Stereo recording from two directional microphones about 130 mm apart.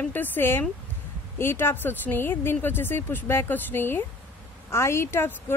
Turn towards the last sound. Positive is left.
turn(degrees=20)  # may be behind; listen again after turning